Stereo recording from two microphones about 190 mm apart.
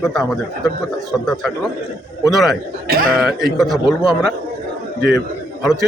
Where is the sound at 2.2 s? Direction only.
Centre (ahead or behind).